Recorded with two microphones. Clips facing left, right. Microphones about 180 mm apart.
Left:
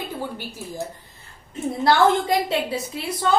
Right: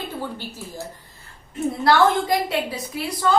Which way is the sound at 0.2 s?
15° left (ahead or behind).